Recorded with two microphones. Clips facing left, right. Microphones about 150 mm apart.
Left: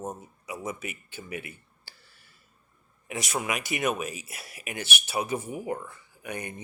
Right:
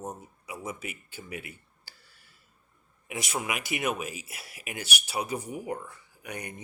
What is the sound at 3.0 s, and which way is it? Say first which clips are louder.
Speech: left 2 dB; 15° right (ahead or behind).